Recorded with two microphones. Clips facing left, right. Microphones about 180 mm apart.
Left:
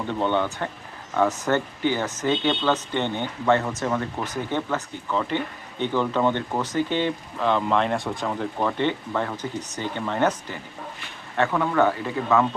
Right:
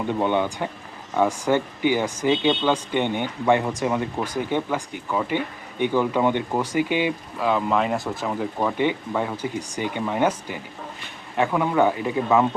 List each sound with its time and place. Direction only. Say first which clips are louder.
0.1 s speech: right 1 dB; 15° right (ahead or behind)